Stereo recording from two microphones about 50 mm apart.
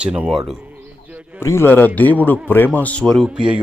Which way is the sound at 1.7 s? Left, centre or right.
Left.